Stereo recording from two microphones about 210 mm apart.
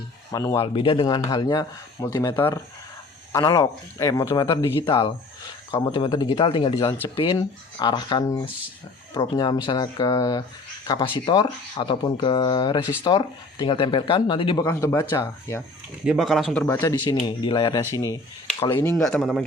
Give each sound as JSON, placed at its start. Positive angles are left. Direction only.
{"t": 0.3, "sound": "speech", "side_deg": 15}
{"t": 16.0, "sound": "speech", "side_deg": 0}
{"t": 16.8, "sound": "speech", "side_deg": 20}
{"t": 18.9, "sound": "speech", "side_deg": 5}